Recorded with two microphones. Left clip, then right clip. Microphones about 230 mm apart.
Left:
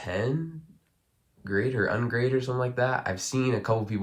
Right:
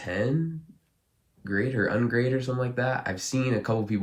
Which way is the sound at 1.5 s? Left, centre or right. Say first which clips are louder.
Even; centre.